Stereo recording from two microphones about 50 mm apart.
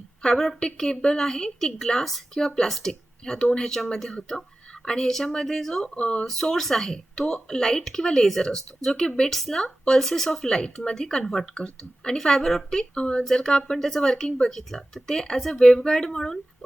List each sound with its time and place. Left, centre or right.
0.2 s speech: centre
5.8 s speech: left
6.2 s speech: centre